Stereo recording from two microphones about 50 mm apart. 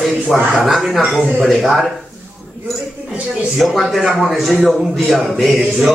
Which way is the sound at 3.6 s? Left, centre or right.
Centre.